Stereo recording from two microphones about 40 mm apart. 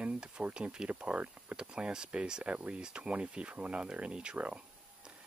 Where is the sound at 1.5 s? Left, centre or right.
Right.